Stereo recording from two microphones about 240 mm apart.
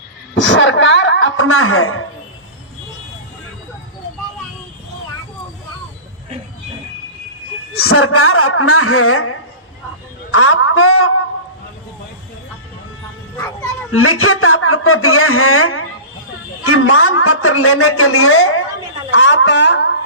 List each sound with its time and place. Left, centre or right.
0.3 s a sound: left
7.7 s a man's voice: left
13.9 s a man's voice: left
19.1 s speech: left